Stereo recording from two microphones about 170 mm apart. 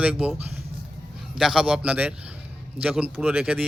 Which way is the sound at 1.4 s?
5° right (ahead or behind).